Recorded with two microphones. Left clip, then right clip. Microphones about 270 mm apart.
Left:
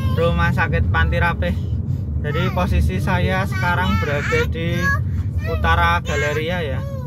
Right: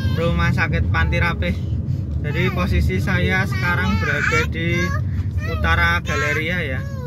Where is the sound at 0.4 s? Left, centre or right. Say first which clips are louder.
Left 1 dB; centre.